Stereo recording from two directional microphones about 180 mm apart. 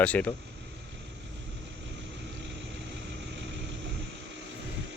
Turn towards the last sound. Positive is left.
turn(degrees=-90)